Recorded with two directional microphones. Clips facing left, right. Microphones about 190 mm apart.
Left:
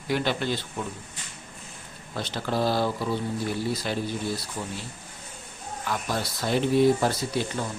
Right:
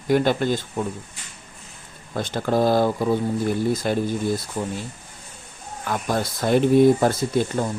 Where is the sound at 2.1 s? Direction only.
50° right (ahead or behind).